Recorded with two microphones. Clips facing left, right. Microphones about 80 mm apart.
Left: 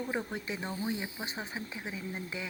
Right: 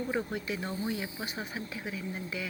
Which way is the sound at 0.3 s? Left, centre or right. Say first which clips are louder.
Right 2 dB; left.